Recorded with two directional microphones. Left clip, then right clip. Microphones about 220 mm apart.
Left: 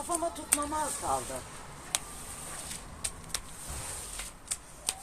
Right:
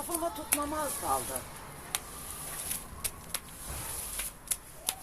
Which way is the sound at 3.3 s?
10° left (ahead or behind).